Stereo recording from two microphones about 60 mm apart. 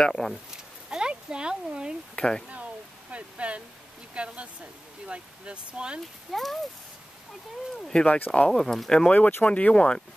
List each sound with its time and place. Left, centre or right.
0.0 s speech: centre
0.8 s a sound: centre
2.1 s speech: centre
2.5 s a sound: right
4.1 s speech: centre
6.3 s speech: centre
7.7 s speech: centre